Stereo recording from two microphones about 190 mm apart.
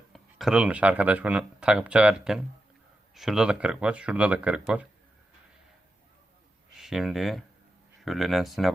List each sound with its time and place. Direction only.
0.1 s speech: centre (ahead or behind)
6.7 s speech: centre (ahead or behind)